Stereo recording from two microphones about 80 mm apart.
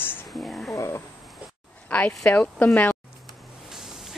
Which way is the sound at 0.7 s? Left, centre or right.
Left.